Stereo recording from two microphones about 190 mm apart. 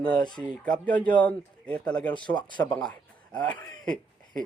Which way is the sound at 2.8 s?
5° left (ahead or behind).